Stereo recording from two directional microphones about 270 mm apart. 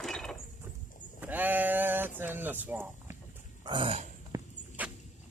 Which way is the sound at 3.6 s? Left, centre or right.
Centre.